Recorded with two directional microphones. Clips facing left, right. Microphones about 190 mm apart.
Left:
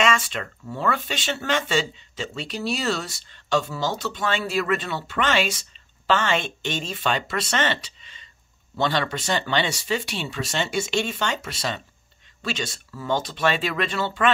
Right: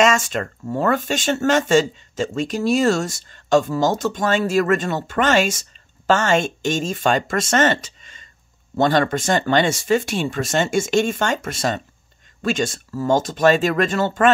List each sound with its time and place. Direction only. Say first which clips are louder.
0.0 s speech: right 6 dB; 45° right (ahead or behind)